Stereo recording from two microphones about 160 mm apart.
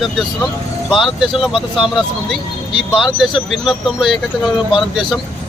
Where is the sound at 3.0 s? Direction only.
Centre (ahead or behind).